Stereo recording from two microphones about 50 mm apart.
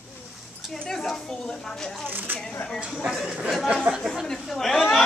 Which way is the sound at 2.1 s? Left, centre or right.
Right.